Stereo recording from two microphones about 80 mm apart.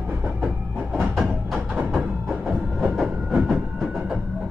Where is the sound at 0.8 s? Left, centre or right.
Right.